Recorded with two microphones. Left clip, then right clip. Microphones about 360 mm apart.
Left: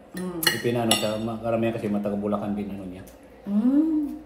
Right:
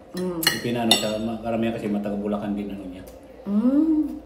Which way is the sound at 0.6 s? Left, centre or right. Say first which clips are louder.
Right 2 dB; centre.